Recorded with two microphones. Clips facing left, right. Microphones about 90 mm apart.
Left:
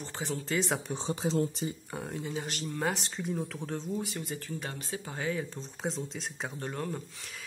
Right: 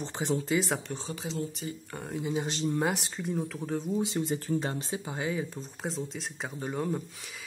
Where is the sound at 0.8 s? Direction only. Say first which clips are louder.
Left 3 dB; 20° left (ahead or behind).